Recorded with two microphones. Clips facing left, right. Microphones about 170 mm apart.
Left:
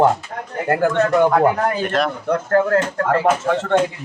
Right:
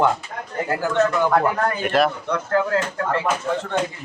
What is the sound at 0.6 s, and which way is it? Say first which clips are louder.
Speech: left 4 dB; 60° left (ahead or behind).